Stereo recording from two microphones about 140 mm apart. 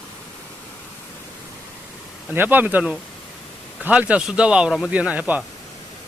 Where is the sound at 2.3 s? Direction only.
15° right (ahead or behind).